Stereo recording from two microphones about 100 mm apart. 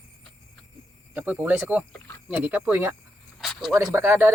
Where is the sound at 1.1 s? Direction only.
15° right (ahead or behind).